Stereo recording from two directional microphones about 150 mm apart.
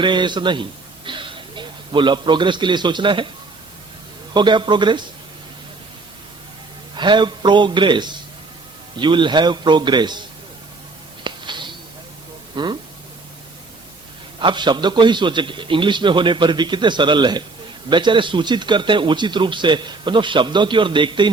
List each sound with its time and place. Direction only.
0.0 s a man's voice: 30° right (ahead or behind)
4.4 s speech: 30° right (ahead or behind)
6.9 s speech: 30° right (ahead or behind)
11.2 s a sound: 30° right (ahead or behind)
12.5 s speech: 30° right (ahead or behind)
14.3 s speech: 30° right (ahead or behind)